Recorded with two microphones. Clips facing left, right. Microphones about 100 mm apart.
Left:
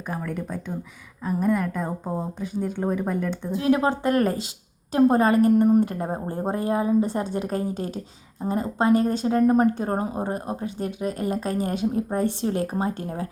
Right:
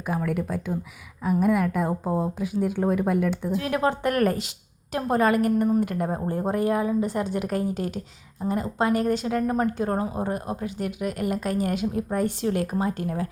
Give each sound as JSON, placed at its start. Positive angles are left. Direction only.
{"t": 0.1, "sound": "speech", "side_deg": -5}
{"t": 3.5, "sound": "a woman's voice", "side_deg": 25}